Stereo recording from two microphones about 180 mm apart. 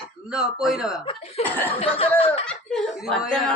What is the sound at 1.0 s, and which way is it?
Speech, 35° left (ahead or behind).